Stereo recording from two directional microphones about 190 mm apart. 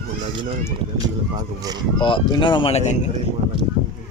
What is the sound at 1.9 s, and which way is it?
Speech, 25° left (ahead or behind).